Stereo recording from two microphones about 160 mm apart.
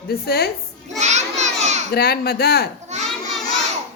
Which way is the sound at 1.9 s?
70° left (ahead or behind).